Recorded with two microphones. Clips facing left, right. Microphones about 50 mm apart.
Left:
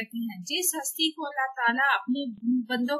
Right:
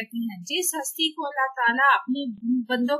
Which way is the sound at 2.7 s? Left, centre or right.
Right.